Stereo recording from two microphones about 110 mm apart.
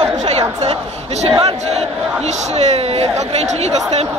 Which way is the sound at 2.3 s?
85° right.